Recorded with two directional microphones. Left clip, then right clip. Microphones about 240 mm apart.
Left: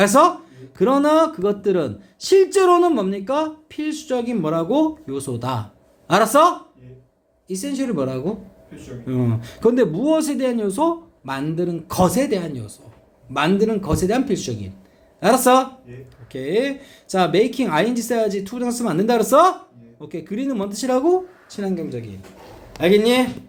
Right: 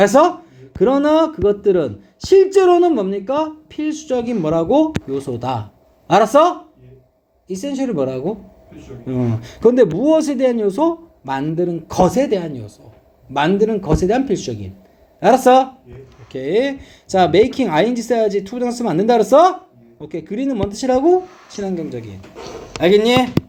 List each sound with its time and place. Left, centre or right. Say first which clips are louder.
0.0 s speech: right 2 dB; centre